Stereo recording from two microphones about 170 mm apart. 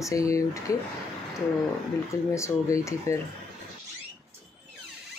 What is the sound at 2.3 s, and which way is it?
Speech, 15° left (ahead or behind).